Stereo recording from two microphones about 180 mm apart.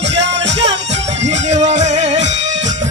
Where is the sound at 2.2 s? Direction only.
90° right.